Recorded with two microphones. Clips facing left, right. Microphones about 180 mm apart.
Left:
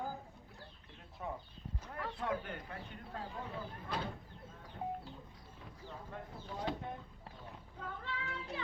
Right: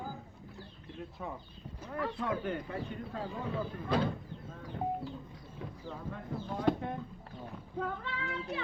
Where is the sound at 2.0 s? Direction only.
90° right.